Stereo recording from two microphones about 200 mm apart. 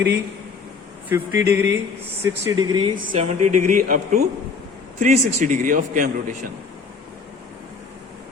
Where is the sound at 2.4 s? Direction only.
20° right (ahead or behind); by 6.3 s 40° right (ahead or behind).